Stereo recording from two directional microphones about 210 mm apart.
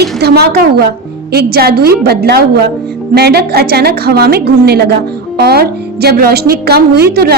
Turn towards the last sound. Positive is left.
turn(degrees=-50)  # may be behind; listen again after turning